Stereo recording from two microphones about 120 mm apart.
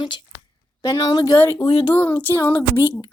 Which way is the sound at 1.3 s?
20° left (ahead or behind).